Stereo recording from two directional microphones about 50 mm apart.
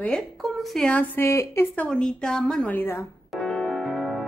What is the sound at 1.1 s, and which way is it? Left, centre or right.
Speech, left.